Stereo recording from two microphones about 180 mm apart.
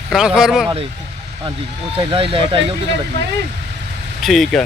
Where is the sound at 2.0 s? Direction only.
30° right (ahead or behind).